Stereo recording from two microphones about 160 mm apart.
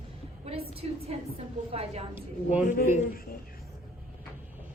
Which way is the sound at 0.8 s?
40° right (ahead or behind).